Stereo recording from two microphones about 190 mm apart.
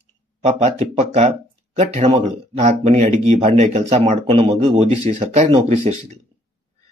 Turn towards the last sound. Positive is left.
turn(degrees=-35)  # may be behind; listen again after turning